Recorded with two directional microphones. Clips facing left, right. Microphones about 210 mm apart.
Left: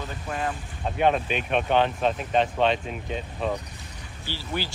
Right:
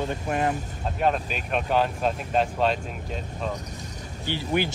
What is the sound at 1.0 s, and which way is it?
Speech, centre (ahead or behind).